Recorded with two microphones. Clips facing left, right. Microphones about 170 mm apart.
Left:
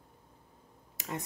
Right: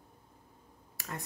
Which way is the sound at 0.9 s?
20° left (ahead or behind).